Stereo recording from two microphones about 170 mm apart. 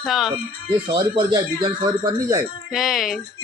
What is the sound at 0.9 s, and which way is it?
Speech, 25° right (ahead or behind).